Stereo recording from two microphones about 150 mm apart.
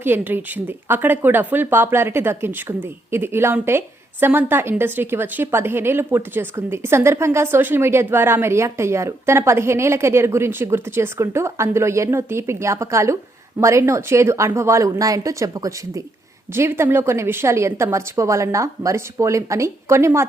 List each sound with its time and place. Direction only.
0.0 s a woman's voice: 15° right (ahead or behind)